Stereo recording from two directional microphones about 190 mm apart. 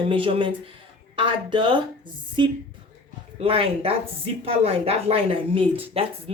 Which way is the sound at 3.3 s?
30° right (ahead or behind).